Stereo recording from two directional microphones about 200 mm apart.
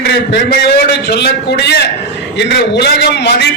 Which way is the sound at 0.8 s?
55° left (ahead or behind).